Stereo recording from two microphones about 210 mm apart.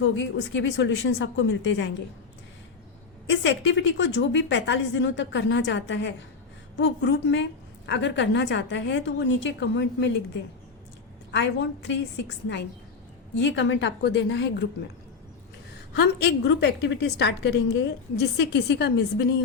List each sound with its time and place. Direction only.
0.0 s a woman's voice: 60° left (ahead or behind)
3.2 s a woman's voice: 60° left (ahead or behind)
11.3 s a woman's voice: 60° left (ahead or behind)
13.4 s a woman's voice: 60° left (ahead or behind)
16.0 s a woman's voice: 50° left (ahead or behind)